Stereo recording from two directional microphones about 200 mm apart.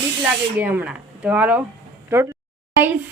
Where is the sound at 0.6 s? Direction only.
10° right (ahead or behind).